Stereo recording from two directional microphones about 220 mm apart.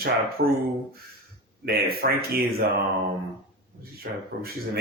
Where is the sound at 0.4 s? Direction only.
45° right (ahead or behind).